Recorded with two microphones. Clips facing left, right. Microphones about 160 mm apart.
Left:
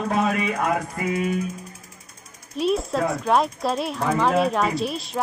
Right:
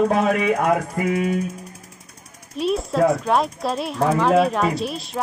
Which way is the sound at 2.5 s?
Centre (ahead or behind).